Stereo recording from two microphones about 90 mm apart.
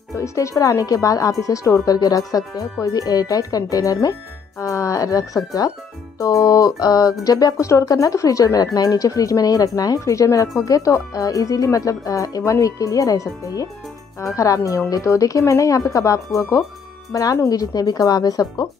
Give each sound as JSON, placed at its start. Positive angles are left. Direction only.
{"t": 0.1, "sound": "speech", "side_deg": 35}